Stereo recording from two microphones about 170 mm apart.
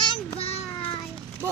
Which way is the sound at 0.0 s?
30° left (ahead or behind).